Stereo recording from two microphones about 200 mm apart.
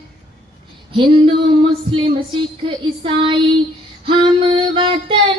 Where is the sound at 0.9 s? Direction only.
25° right (ahead or behind).